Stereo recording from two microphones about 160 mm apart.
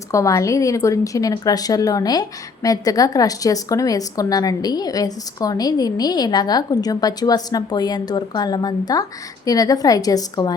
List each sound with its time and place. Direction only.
0.1 s a woman's voice: 20° left (ahead or behind)